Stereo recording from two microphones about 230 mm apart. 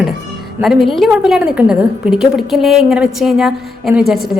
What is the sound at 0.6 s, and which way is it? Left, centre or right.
A woman's voice, centre.